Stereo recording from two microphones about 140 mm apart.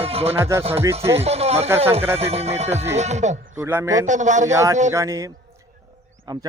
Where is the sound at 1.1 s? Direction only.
50° right (ahead or behind).